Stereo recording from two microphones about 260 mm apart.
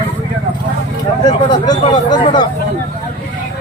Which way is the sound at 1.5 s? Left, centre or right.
Centre.